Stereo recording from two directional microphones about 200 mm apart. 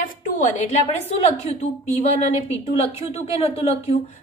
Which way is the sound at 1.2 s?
30° left (ahead or behind).